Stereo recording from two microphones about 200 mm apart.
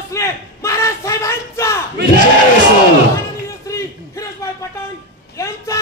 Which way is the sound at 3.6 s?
15° left (ahead or behind).